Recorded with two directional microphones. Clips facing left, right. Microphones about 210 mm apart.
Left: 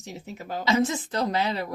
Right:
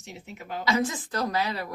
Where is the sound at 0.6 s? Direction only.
25° left (ahead or behind).